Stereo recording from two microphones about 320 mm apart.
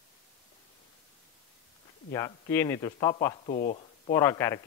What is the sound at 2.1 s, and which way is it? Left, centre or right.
Speech, centre.